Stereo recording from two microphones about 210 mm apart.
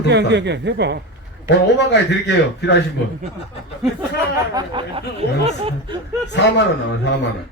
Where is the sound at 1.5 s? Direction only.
55° left (ahead or behind).